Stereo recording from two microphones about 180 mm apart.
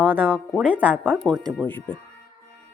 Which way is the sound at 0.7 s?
10° left (ahead or behind).